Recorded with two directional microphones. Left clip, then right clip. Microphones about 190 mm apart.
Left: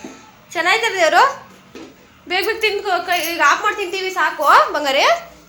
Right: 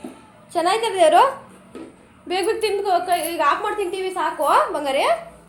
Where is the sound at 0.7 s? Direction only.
25° right (ahead or behind).